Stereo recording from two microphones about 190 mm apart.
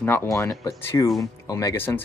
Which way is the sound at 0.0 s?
10° left (ahead or behind).